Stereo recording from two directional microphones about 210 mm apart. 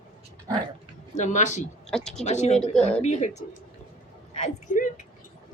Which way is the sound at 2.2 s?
35° left (ahead or behind).